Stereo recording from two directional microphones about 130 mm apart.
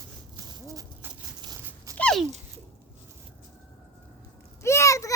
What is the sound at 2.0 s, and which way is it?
Dog, 5° left (ahead or behind).